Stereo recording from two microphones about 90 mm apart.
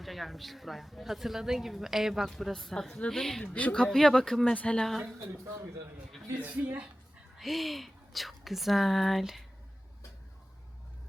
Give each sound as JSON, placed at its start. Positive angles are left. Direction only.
{"t": 0.0, "sound": "speech", "side_deg": 0}
{"t": 3.4, "sound": "speech", "side_deg": 15}
{"t": 6.4, "sound": "a woman's voice", "side_deg": -15}
{"t": 7.3, "sound": "speech", "side_deg": 0}